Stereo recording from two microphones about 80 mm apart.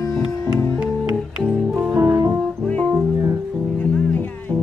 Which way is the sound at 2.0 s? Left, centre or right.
Right.